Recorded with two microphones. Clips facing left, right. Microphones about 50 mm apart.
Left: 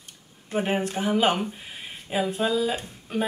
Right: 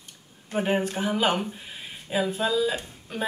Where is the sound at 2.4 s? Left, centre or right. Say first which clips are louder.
Left 1 dB; centre.